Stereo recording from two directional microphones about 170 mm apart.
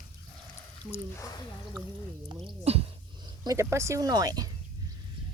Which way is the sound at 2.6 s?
35° right (ahead or behind).